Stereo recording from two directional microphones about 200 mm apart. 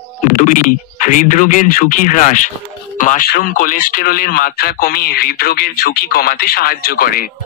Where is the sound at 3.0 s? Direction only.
40° left (ahead or behind).